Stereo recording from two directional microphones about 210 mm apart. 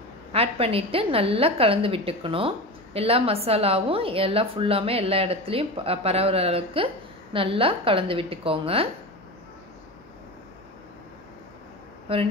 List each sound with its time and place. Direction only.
0.3 s a woman's voice: 25° right (ahead or behind)
12.1 s a woman's voice: 25° right (ahead or behind)